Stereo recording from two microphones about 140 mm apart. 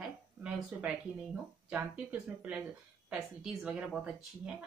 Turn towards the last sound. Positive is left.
turn(degrees=-5)  # may be behind; listen again after turning